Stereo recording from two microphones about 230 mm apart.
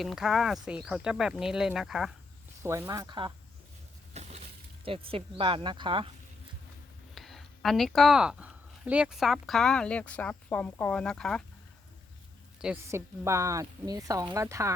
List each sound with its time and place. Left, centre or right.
0.0 s speech: centre
2.6 s speech: centre
4.1 s a sound: right
4.9 s speech: right
7.1 s speech: centre
12.5 s speech: centre